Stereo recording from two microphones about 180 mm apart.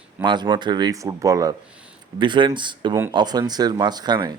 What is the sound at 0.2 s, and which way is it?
Speech, 25° right (ahead or behind).